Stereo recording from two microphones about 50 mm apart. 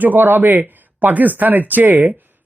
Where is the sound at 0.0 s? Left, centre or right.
Right.